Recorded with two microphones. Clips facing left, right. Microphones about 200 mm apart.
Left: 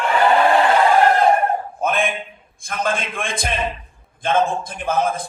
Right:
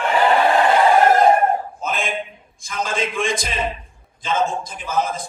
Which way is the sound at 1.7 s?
55° left (ahead or behind).